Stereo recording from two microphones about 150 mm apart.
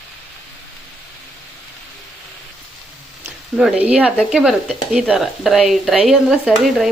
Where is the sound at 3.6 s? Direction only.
10° right (ahead or behind).